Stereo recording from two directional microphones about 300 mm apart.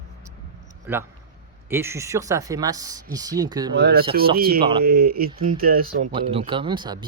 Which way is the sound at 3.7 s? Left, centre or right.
Right.